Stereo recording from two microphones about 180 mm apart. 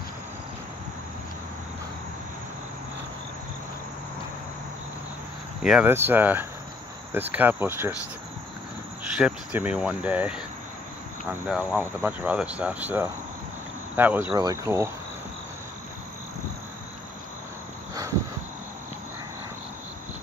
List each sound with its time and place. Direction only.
5.6 s speech: 5° right (ahead or behind)
9.2 s speech: 5° right (ahead or behind)